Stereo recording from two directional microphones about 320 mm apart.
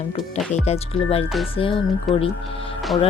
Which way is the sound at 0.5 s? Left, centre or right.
Centre.